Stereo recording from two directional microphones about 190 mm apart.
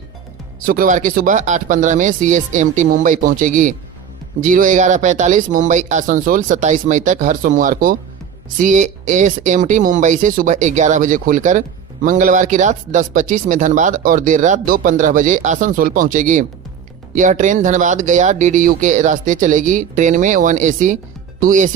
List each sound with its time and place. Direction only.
0.6 s speech: 50° right (ahead or behind)